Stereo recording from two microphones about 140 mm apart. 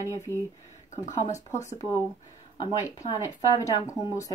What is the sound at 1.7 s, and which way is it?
Speech, 25° left (ahead or behind).